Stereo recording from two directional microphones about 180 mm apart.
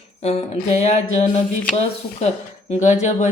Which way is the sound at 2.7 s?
40° left (ahead or behind).